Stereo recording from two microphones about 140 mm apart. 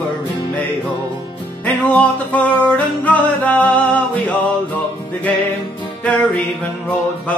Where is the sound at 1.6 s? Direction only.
10° left (ahead or behind).